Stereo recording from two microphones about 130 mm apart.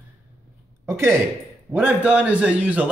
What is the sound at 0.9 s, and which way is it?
Speech, 20° right (ahead or behind).